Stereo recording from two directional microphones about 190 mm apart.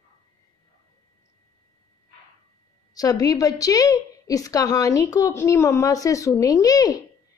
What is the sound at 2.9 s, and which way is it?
A woman's voice, 20° left (ahead or behind).